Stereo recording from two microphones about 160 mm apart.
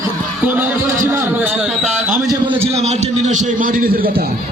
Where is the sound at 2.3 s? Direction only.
30° right (ahead or behind).